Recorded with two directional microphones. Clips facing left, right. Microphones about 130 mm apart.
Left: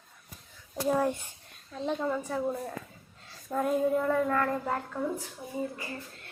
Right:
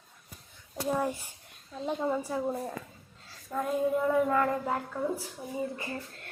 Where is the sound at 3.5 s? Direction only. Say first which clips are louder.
Left 2 dB; centre (ahead or behind).